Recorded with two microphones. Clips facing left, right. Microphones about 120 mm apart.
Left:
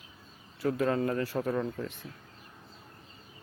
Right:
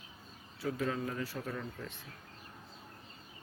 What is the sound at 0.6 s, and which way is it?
Speech, 55° left (ahead or behind).